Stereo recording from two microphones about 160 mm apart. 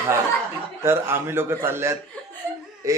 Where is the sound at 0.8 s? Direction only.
15° right (ahead or behind).